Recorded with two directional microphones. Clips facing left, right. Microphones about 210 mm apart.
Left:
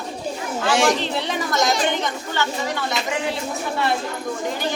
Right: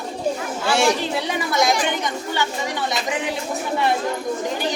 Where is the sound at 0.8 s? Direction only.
10° right (ahead or behind).